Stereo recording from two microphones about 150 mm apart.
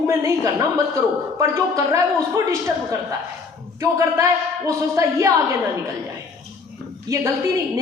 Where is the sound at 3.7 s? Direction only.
20° right (ahead or behind).